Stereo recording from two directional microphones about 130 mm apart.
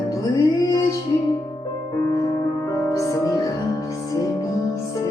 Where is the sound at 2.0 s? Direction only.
25° left (ahead or behind).